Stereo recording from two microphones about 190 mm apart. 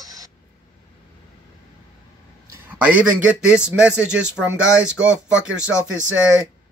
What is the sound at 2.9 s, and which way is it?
Speech, 5° right (ahead or behind).